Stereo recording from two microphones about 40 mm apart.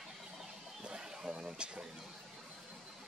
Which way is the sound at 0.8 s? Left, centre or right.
Right.